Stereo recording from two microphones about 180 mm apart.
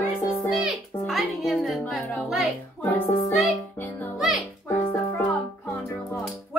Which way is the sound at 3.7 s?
10° left (ahead or behind).